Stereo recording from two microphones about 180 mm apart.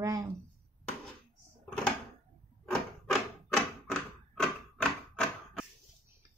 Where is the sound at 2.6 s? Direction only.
5° left (ahead or behind).